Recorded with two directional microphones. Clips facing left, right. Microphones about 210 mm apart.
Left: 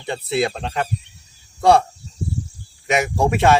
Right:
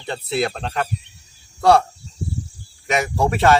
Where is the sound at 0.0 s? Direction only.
20° left (ahead or behind).